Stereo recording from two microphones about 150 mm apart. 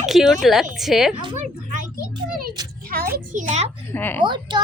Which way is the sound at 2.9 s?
75° right (ahead or behind).